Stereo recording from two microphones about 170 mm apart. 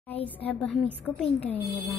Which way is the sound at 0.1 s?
10° left (ahead or behind).